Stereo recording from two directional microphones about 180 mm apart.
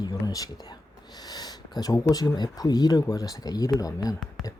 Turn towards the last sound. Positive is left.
turn(degrees=20)  # may be behind; listen again after turning